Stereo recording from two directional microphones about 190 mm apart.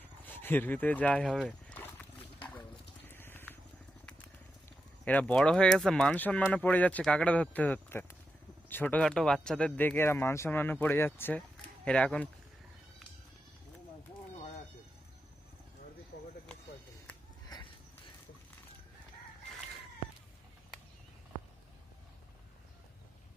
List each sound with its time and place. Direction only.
0.3 s speech: 10° left (ahead or behind)
3.1 s vehicle: 10° left (ahead or behind)
5.0 s speech: 5° left (ahead or behind)
16.1 s a sound: 55° left (ahead or behind)